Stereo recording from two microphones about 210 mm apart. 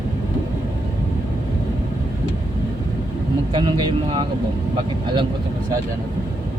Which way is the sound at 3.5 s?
25° right (ahead or behind).